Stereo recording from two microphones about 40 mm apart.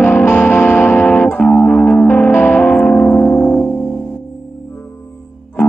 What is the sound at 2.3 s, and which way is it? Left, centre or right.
Music, left.